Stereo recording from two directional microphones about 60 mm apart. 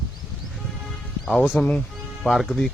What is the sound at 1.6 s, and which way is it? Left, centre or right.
Speech, left.